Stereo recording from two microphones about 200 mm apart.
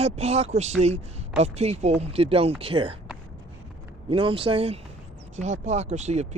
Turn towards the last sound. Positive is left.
turn(degrees=-35)  # may be behind; listen again after turning